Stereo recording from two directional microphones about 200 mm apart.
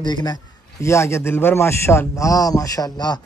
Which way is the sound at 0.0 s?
20° left (ahead or behind).